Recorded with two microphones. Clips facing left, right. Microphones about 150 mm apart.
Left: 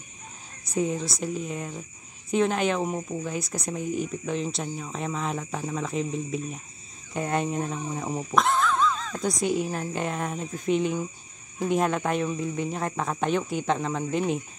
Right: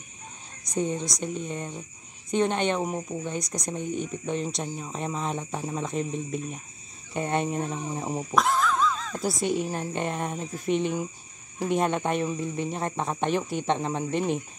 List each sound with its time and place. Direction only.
0.7 s speech: 5° left (ahead or behind)
7.7 s speech: 30° right (ahead or behind)
8.3 s speech: centre (ahead or behind)
12.7 s speech: 30° right (ahead or behind)
13.2 s speech: centre (ahead or behind)
13.7 s speech: 30° right (ahead or behind)
14.1 s speech: centre (ahead or behind)